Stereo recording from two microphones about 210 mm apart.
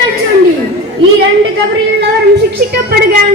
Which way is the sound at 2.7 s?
45° right (ahead or behind).